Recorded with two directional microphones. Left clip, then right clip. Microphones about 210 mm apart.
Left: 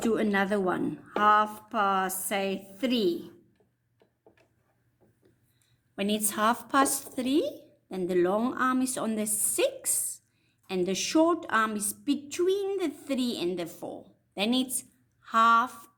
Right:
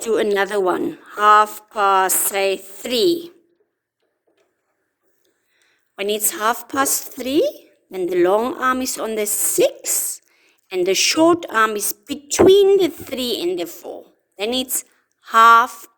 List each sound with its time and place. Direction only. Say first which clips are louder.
0.0 s a woman's voice: right 9 dB; 45° right (ahead or behind)
6.0 s a woman's voice: right 7 dB; 40° right (ahead or behind)